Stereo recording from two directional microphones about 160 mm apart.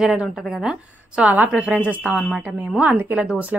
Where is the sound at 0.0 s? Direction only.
Centre (ahead or behind).